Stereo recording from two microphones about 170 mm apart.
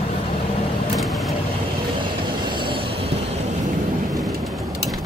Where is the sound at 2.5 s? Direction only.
30° right (ahead or behind).